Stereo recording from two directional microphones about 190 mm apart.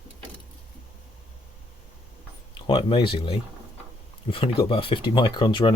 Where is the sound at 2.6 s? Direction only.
25° left (ahead or behind).